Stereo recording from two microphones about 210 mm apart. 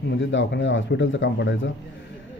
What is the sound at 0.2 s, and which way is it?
Speech, 60° left (ahead or behind).